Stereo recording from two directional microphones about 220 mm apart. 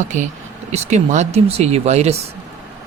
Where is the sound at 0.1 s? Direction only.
35° right (ahead or behind).